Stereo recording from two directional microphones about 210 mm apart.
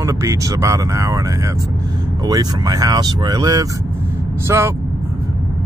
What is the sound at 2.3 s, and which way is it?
Speech, 15° right (ahead or behind).